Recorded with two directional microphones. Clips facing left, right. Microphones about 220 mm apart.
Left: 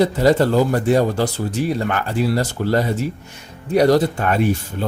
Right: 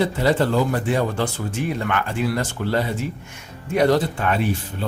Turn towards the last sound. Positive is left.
turn(degrees=45)  # may be behind; listen again after turning